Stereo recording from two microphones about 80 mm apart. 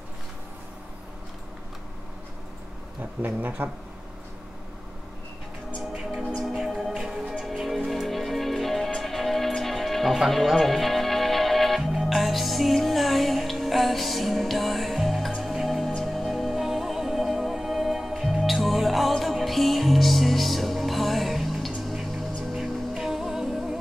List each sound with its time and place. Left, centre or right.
3.0 s speech: right
6.3 s music: centre